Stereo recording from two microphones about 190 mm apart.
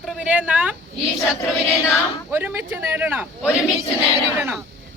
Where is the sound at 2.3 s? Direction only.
10° right (ahead or behind).